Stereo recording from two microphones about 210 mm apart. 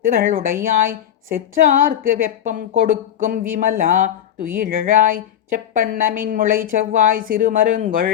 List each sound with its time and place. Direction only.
0.0 s a woman's voice: 45° right (ahead or behind)